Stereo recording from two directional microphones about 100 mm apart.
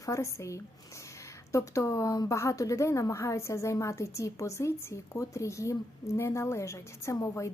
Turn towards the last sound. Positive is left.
turn(degrees=30)  # may be behind; listen again after turning